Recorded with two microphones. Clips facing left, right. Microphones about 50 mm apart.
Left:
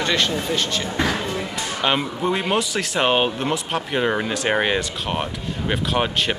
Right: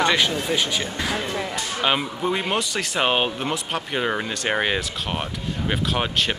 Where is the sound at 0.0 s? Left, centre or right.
Centre.